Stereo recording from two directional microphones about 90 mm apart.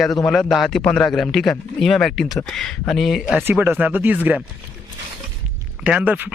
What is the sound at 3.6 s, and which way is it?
Speech, 20° right (ahead or behind).